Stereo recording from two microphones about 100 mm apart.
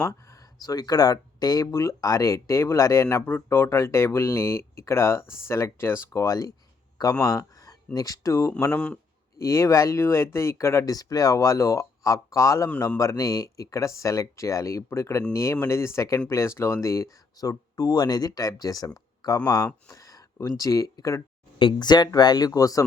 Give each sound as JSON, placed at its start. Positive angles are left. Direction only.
{"t": 0.0, "sound": "speech", "side_deg": 35}
{"t": 3.2, "sound": "speech", "side_deg": 20}
{"t": 8.7, "sound": "speech", "side_deg": 10}
{"t": 9.4, "sound": "speech", "side_deg": 30}
{"t": 21.6, "sound": "speech", "side_deg": 50}